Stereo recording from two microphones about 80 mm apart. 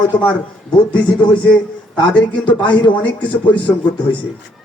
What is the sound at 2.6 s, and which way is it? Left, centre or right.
Speech, left.